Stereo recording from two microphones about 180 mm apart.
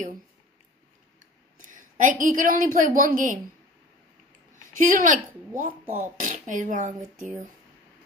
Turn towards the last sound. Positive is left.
turn(degrees=-45)  # may be behind; listen again after turning